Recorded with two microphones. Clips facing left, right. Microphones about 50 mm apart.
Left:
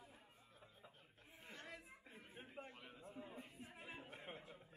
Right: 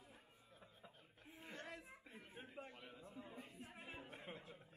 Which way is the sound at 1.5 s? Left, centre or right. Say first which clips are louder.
Right 2 dB; right.